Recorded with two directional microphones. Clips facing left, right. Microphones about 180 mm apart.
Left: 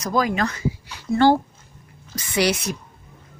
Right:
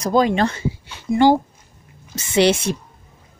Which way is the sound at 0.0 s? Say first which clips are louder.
Right 5 dB; 30° right (ahead or behind).